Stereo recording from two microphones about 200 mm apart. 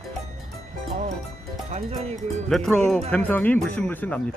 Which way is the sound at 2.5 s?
Centre (ahead or behind).